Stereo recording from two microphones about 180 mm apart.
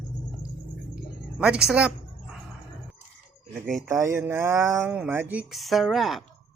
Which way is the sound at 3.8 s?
15° right (ahead or behind).